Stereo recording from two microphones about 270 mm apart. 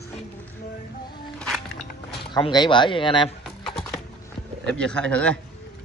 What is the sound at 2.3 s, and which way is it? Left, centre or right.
Speech, centre.